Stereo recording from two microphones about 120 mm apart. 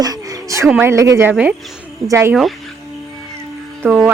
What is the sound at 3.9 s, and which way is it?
Speech, 10° right (ahead or behind).